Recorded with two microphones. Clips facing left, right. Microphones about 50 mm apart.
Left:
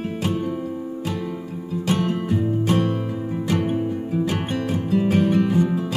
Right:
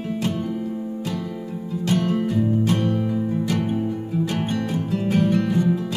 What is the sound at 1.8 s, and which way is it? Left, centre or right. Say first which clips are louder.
Music: right 1 dB; left.